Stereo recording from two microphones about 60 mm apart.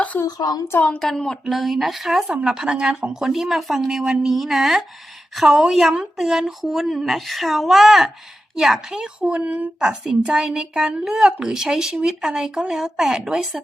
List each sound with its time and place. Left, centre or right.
0.3 s speech: left
0.9 s speech: centre
1.5 s speech: centre
2.2 s a woman's voice: centre
9.9 s a woman's voice: centre